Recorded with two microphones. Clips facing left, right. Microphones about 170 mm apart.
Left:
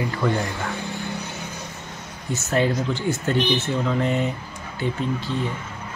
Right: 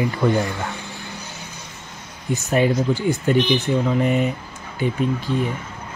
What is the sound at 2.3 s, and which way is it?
Speech, 15° right (ahead or behind).